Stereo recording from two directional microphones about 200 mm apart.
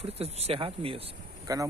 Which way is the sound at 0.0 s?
30° right (ahead or behind).